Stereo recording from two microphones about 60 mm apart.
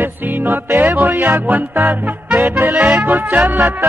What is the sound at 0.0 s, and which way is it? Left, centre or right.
Music, right.